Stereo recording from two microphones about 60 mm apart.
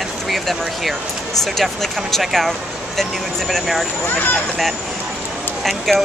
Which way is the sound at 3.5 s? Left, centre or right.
Centre.